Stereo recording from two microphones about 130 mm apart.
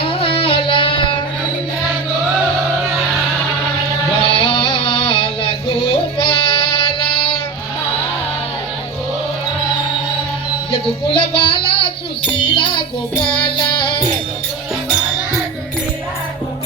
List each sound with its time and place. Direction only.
0.0 s music: 45° left (ahead or behind)
4.2 s a sound: 45° left (ahead or behind)
6.2 s music: 45° left (ahead or behind)
10.7 s music: 40° left (ahead or behind)
13.2 s child singing: 40° left (ahead or behind)